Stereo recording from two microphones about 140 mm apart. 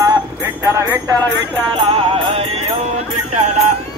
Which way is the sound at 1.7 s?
45° right (ahead or behind).